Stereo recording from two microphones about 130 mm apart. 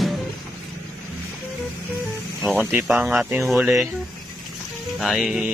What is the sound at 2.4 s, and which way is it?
Speech, 15° right (ahead or behind).